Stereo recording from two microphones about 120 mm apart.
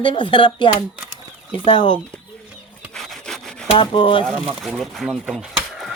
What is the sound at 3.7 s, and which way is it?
Speech, 45° left (ahead or behind).